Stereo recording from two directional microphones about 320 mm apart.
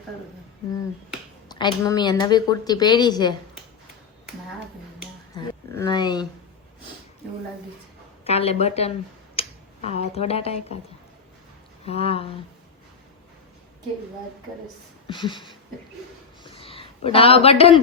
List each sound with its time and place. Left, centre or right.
1.5 s a woman's voice: centre
5.3 s a sound: centre
8.2 s speech: centre
11.9 s a woman's voice: centre
15.0 s a woman's voice: centre
16.4 s a sound: centre